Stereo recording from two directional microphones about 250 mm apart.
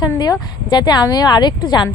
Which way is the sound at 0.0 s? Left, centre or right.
Centre.